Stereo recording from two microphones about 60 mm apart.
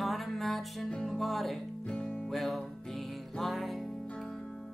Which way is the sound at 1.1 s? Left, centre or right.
Centre.